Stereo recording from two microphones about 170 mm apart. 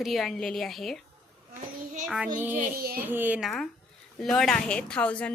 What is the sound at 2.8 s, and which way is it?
Speech, 60° right (ahead or behind).